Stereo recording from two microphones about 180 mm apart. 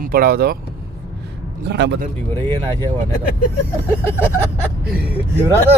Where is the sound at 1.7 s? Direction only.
70° right (ahead or behind).